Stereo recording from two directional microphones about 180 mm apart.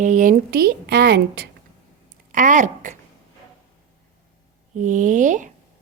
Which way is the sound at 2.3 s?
45° right (ahead or behind).